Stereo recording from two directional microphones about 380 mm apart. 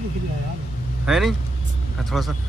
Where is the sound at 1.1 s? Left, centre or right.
Centre.